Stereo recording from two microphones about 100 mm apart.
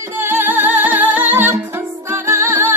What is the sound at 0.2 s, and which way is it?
Music, 20° right (ahead or behind).